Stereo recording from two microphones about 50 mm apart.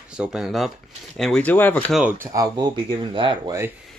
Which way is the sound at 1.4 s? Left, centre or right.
Left.